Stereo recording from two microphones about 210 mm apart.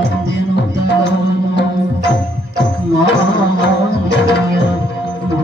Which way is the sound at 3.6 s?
55° left (ahead or behind).